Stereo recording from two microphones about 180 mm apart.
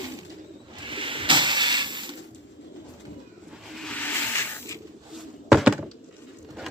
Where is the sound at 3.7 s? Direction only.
5° left (ahead or behind).